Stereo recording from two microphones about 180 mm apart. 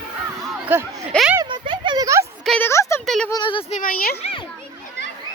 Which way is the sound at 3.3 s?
25° left (ahead or behind).